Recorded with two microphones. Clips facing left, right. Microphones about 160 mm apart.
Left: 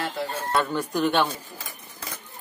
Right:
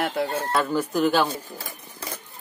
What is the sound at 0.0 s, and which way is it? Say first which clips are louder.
Speech: right 4 dB; 60° right (ahead or behind).